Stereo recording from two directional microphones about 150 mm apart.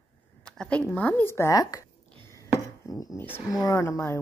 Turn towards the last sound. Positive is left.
turn(degrees=20)  # may be behind; listen again after turning